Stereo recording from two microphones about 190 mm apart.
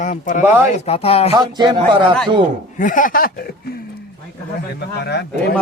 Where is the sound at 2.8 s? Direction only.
45° left (ahead or behind).